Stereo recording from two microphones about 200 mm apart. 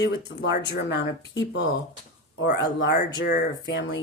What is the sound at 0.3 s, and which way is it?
Speech, 60° left (ahead or behind).